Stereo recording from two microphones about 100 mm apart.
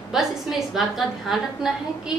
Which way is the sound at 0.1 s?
5° right (ahead or behind).